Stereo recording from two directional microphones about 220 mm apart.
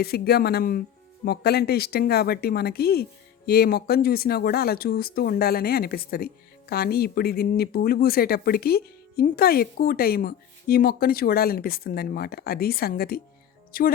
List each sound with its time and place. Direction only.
0.0 s speech: 45° left (ahead or behind)